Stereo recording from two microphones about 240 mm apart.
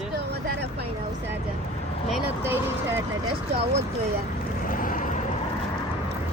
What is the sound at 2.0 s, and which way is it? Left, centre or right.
Speech, centre.